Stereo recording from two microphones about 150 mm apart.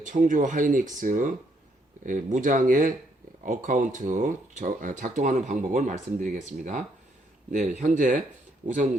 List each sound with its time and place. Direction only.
0.0 s speech: 60° right (ahead or behind)